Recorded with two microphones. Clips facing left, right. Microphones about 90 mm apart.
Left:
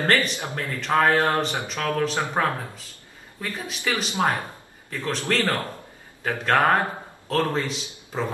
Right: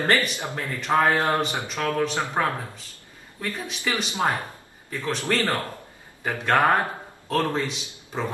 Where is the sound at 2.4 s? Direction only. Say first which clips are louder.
Left 1 dB; 5° left (ahead or behind).